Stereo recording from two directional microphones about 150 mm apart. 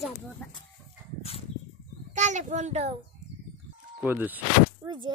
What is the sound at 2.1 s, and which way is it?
Speech, 55° right (ahead or behind).